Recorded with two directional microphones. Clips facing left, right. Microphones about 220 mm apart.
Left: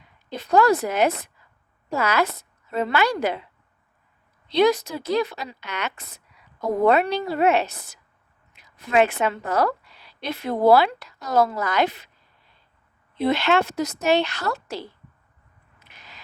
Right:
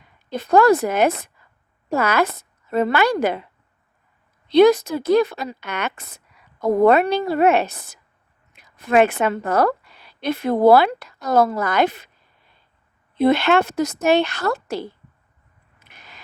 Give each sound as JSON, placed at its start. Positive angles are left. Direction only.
{"t": 0.3, "sound": "a woman's voice", "side_deg": -50}
{"t": 4.4, "sound": "a woman's voice", "side_deg": -50}
{"t": 13.1, "sound": "speech", "side_deg": -50}
{"t": 15.8, "sound": "a sound", "side_deg": -50}